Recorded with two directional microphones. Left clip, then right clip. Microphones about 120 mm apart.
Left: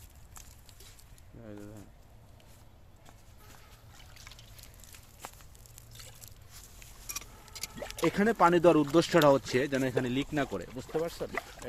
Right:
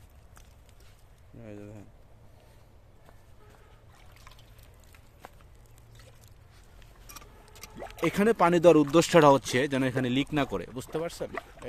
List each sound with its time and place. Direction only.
1.5 s speech: 60° right (ahead or behind)
3.9 s trickle: centre (ahead or behind)
5.2 s a sound: 45° left (ahead or behind)
7.5 s a sound: 10° right (ahead or behind)
8.0 s speech: 65° right (ahead or behind)
8.9 s speech: 70° right (ahead or behind); by 10.8 s 85° right
10.9 s speech: 50° right (ahead or behind)